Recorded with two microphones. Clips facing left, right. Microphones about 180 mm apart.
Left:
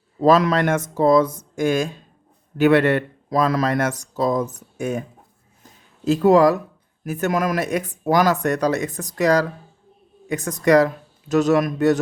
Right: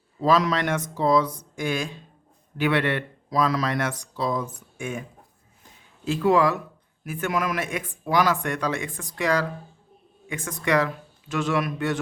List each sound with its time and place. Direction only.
0.2 s speech: 50° left (ahead or behind)
6.1 s speech: 40° left (ahead or behind)